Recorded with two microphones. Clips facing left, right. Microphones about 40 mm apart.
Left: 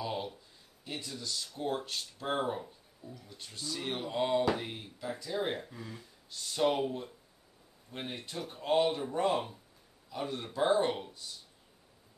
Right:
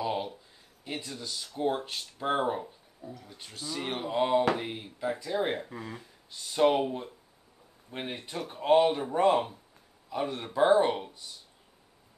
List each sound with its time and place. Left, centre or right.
0.0 s a sound: right
0.8 s speech: right
3.0 s speech: right
3.3 s speech: centre
5.7 s speech: right
6.3 s speech: right